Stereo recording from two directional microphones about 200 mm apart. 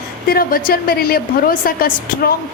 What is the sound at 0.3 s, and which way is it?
Speech, 50° left (ahead or behind).